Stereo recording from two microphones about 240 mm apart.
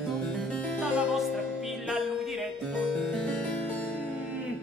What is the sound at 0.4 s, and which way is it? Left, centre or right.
Music, centre.